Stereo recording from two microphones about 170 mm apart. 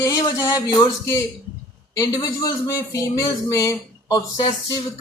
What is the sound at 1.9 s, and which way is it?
Speech, 20° left (ahead or behind).